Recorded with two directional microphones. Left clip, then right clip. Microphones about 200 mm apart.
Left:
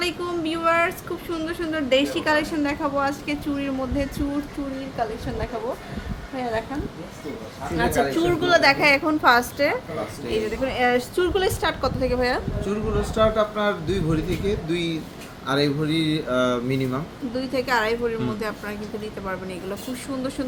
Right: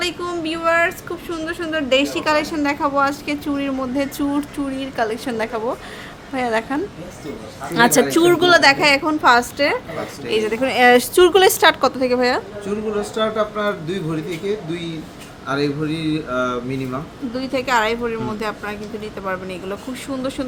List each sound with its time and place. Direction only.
0.0 s a woman's voice: 10° right (ahead or behind)
4.9 s a woman's voice: 40° right (ahead or behind)
7.8 s a woman's voice: 45° right (ahead or behind); by 9.7 s 20° right (ahead or behind)
10.3 s a woman's voice: 30° right (ahead or behind)
12.6 s speech: 5° right (ahead or behind)
15.4 s speech: 30° left (ahead or behind)
17.3 s a woman's voice: 25° right (ahead or behind)